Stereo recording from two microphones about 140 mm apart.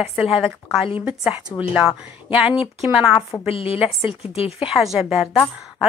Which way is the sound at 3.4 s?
40° left (ahead or behind).